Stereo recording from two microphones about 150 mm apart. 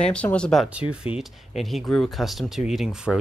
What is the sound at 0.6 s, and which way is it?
Speech, 5° right (ahead or behind).